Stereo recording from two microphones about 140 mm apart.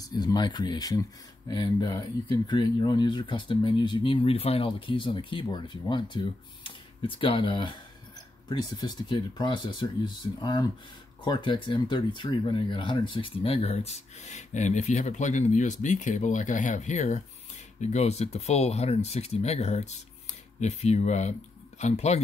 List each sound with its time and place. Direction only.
0.0 s speech: 30° left (ahead or behind); by 22.2 s 50° left (ahead or behind)